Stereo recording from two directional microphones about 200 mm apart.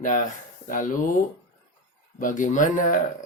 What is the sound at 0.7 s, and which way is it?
Speech, 40° left (ahead or behind).